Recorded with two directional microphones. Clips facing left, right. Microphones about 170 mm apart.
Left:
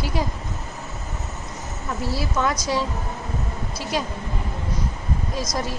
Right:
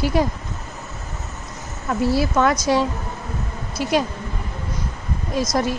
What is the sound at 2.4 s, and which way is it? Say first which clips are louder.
Speech: right 3 dB; 65° right (ahead or behind).